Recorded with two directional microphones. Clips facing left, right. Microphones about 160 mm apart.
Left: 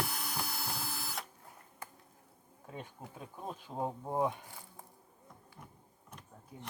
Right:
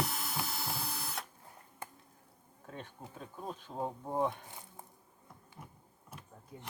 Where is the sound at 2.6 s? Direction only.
10° left (ahead or behind).